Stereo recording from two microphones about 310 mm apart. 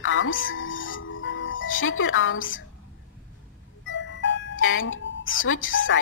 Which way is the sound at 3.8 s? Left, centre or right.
Left.